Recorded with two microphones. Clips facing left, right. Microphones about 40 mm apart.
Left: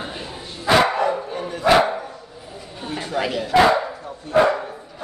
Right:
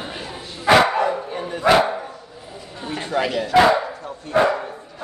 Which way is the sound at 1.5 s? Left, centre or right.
Right.